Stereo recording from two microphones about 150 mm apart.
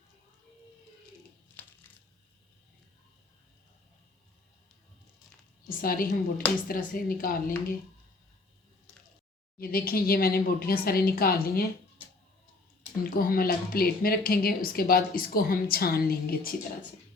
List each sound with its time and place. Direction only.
1.6 s crushing: 10° left (ahead or behind)
5.6 s a woman's voice: 75° left (ahead or behind)
9.6 s a woman's voice: 85° left
13.1 s speech: 75° left (ahead or behind)